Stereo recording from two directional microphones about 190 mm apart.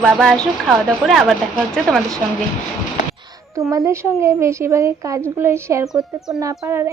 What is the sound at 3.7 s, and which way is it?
A woman's voice, 15° right (ahead or behind).